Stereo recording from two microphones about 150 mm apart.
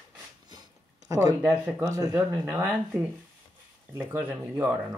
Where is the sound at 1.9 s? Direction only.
20° right (ahead or behind).